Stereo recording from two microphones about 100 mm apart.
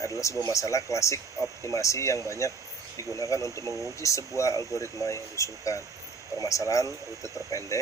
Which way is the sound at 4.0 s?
30° left (ahead or behind).